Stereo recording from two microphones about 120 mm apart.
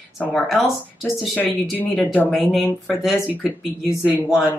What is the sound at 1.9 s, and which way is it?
Speech, 10° left (ahead or behind).